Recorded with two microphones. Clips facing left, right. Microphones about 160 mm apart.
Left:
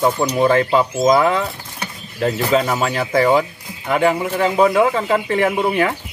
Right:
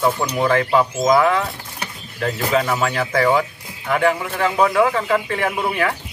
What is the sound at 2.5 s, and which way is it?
Speech, 25° left (ahead or behind).